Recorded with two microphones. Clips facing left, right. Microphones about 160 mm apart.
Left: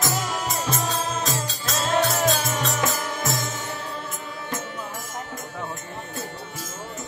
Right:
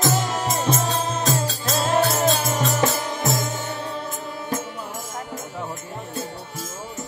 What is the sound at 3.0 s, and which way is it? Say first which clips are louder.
Music: right 3 dB; 20° right (ahead or behind).